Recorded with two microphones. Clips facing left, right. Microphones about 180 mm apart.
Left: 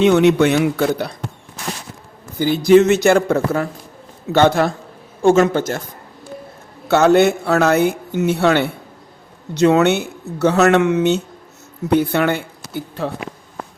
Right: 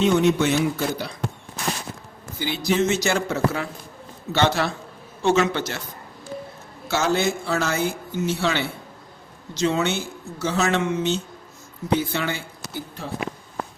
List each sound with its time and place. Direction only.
0.0 s speech: 70° left (ahead or behind)
2.4 s speech: 50° left (ahead or behind)
6.8 s a woman's voice: 60° left (ahead or behind)